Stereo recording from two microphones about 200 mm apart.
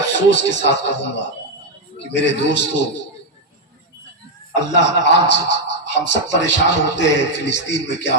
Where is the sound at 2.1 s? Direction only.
60° left (ahead or behind).